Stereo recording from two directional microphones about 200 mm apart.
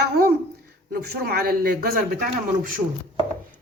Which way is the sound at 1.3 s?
50° right (ahead or behind).